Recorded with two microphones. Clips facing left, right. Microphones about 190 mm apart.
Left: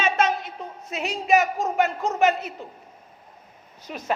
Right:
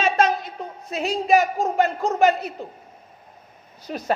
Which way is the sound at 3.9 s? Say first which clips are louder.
Right 5 dB; 40° right (ahead or behind).